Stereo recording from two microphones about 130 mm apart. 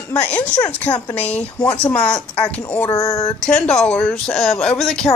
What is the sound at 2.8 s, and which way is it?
Speech, 25° left (ahead or behind).